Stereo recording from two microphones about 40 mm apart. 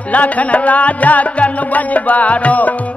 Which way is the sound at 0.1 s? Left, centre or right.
Left.